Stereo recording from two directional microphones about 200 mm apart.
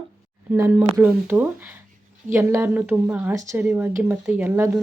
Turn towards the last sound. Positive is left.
turn(degrees=-10)  # may be behind; listen again after turning